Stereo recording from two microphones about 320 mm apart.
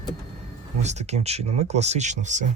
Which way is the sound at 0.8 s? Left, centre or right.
Right.